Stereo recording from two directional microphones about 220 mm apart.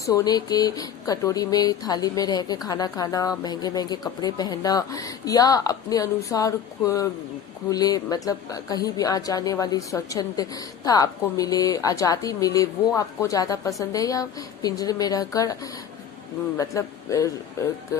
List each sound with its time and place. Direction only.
0.0 s a woman's voice: 15° left (ahead or behind)